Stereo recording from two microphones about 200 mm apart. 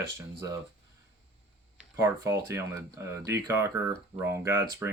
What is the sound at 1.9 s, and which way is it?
Speech, 15° right (ahead or behind).